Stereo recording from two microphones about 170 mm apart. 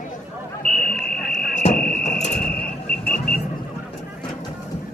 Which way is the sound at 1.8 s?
50° left (ahead or behind).